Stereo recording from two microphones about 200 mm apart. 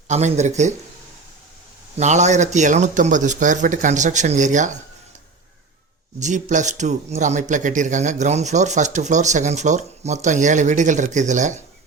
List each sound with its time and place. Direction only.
0.1 s a man's voice: 35° right (ahead or behind)
2.0 s a man's voice: 35° right (ahead or behind)
6.1 s a man's voice: 40° right (ahead or behind)